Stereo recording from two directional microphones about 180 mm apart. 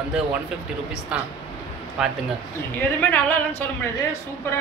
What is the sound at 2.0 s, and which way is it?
Speech, 5° right (ahead or behind).